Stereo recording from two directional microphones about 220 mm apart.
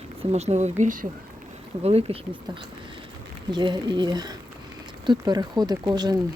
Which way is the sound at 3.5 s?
20° right (ahead or behind).